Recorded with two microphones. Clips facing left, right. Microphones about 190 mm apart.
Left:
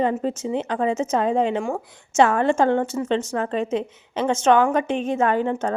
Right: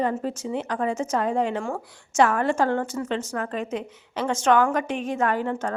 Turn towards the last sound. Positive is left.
turn(degrees=25)  # may be behind; listen again after turning